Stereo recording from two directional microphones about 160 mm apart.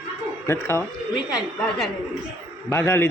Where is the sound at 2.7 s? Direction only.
15° left (ahead or behind).